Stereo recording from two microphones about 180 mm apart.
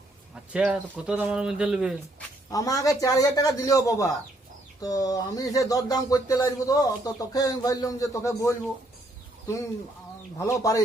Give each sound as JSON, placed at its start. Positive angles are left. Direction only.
{"t": 0.5, "sound": "a man's voice", "side_deg": -5}
{"t": 2.5, "sound": "speech", "side_deg": 20}
{"t": 10.3, "sound": "speech", "side_deg": 15}